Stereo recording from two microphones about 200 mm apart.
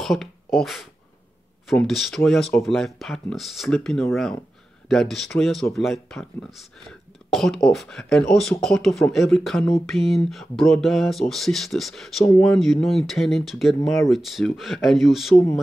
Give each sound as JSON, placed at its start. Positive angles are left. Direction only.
{"t": 0.0, "sound": "speech", "side_deg": 0}